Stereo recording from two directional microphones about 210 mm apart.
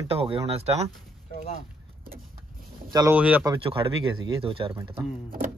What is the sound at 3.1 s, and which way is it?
Speech, 5° right (ahead or behind).